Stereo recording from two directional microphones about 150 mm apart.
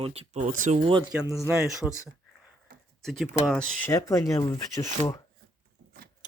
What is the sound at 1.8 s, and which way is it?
Speech, 5° left (ahead or behind).